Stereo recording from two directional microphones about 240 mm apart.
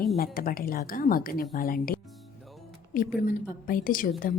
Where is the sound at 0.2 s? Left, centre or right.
Left.